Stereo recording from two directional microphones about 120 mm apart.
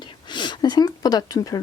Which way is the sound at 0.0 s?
40° left (ahead or behind).